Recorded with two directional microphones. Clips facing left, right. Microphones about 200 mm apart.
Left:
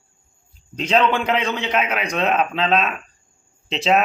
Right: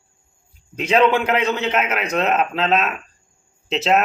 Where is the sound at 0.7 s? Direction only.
10° right (ahead or behind).